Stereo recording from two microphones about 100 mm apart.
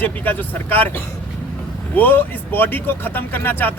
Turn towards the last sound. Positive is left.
turn(degrees=20)  # may be behind; listen again after turning